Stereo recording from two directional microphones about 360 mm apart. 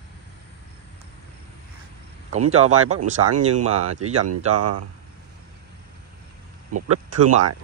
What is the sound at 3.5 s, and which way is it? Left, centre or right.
Speech, right.